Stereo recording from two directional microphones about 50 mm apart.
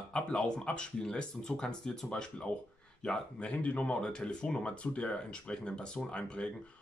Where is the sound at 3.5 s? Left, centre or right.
Left.